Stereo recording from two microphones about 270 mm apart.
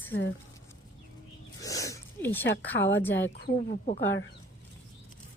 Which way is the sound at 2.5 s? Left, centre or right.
Left.